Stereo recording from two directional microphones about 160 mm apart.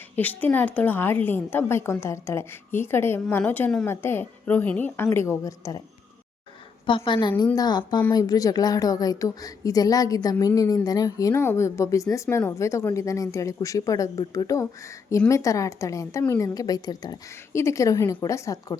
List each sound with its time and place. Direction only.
0.4 s a woman's voice: 10° left (ahead or behind)
6.8 s a woman's voice: 30° left (ahead or behind)